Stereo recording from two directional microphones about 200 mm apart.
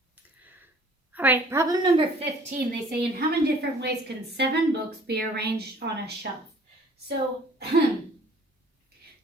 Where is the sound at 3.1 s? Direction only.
50° right (ahead or behind).